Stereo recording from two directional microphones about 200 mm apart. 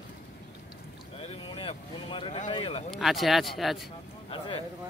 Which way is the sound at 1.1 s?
30° left (ahead or behind).